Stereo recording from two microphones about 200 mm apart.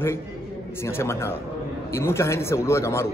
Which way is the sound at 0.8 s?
15° left (ahead or behind).